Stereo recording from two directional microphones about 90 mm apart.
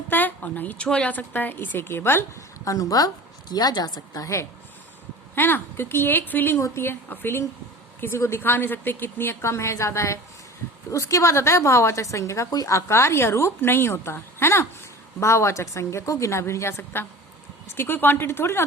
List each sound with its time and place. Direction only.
0.1 s a sound: 20° left (ahead or behind)
0.9 s a woman's voice: 10° left (ahead or behind)
2.6 s a woman's voice: 45° left (ahead or behind)
5.3 s a woman's voice: 25° left (ahead or behind)